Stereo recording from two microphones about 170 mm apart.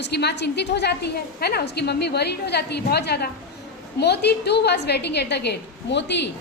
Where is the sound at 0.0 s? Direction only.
75° left (ahead or behind).